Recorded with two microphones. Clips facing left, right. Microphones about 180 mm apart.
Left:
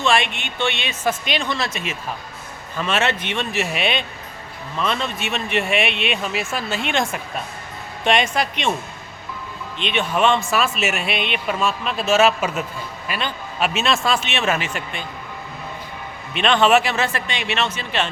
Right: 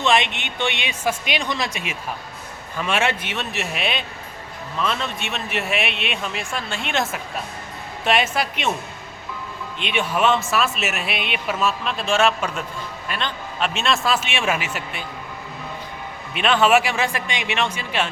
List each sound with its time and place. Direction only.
0.0 s speech: 20° right (ahead or behind)
9.7 s speech: 10° right (ahead or behind)
16.3 s speech: 5° right (ahead or behind)